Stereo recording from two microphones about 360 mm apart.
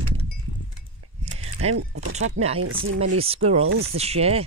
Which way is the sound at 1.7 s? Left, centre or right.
Right.